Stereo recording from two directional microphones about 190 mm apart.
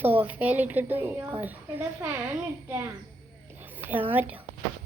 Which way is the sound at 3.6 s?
10° right (ahead or behind).